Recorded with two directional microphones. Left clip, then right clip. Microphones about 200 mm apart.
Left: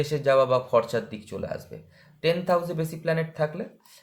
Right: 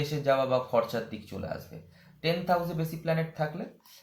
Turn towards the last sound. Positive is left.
turn(degrees=50)  # may be behind; listen again after turning